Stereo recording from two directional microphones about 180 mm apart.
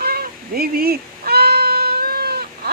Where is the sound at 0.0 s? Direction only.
60° right (ahead or behind).